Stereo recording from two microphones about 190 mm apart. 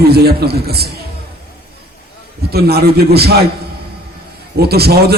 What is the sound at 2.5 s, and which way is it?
Speech, 55° right (ahead or behind).